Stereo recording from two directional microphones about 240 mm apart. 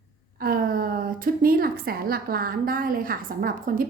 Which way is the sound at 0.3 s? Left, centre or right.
Right.